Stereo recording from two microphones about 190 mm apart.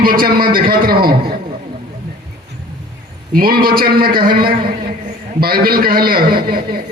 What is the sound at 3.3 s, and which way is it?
A man's voice, 50° right (ahead or behind).